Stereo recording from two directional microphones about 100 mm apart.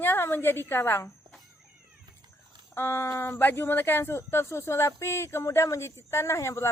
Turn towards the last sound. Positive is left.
turn(degrees=30)  # may be behind; listen again after turning